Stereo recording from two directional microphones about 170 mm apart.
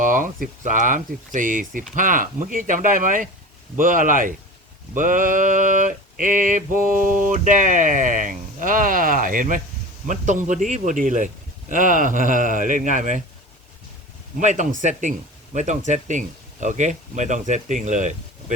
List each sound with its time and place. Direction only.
0.0 s speech: 50° right (ahead or behind)
14.3 s speech: 45° right (ahead or behind)